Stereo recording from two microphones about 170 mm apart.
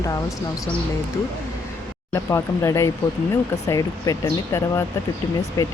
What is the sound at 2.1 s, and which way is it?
Speech, 15° left (ahead or behind).